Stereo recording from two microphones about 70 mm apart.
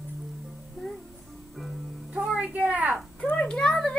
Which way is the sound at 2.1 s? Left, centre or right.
Centre.